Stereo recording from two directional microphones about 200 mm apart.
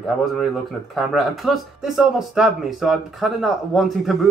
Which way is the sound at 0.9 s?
Centre (ahead or behind).